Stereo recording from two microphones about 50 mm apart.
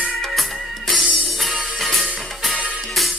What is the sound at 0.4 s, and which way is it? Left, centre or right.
Music, centre.